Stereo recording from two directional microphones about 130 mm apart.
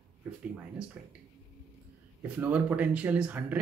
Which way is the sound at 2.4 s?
10° right (ahead or behind).